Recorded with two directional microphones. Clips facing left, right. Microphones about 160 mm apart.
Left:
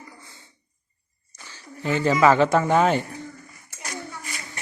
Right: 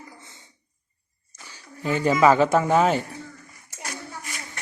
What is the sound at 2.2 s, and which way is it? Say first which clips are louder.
Speech: even; 10° right (ahead or behind).